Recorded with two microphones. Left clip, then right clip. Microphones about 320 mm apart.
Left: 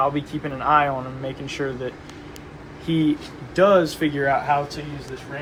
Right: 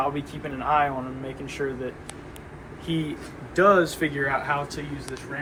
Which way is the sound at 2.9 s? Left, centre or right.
Left.